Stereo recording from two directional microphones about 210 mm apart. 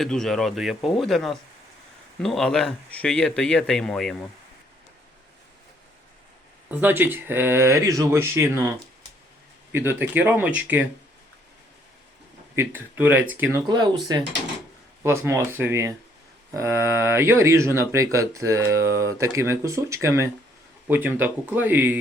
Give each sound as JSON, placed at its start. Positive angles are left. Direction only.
{"t": 0.0, "sound": "speech", "side_deg": 0}
{"t": 6.7, "sound": "speech", "side_deg": -10}
{"t": 9.7, "sound": "speech", "side_deg": -10}
{"t": 12.5, "sound": "speech", "side_deg": -10}
{"t": 13.7, "sound": "speech", "side_deg": -20}